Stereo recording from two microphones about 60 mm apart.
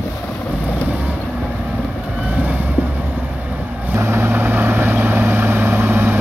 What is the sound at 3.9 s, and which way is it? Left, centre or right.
Vehicle, right.